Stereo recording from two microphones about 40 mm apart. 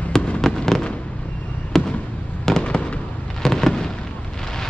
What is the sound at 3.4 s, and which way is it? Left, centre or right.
Fireworks, centre.